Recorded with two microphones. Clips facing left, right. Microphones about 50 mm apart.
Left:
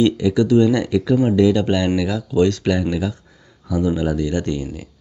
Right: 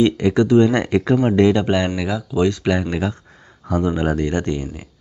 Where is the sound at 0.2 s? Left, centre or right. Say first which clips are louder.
Right 1 dB; right.